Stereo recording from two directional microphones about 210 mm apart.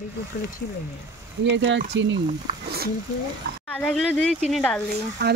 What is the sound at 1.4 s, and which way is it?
Speech, 60° right (ahead or behind).